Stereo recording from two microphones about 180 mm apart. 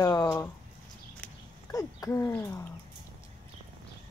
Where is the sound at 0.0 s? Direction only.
20° left (ahead or behind).